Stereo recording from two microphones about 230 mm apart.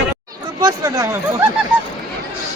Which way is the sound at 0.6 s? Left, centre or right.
Centre.